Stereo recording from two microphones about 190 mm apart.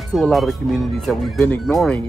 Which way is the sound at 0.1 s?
Centre (ahead or behind).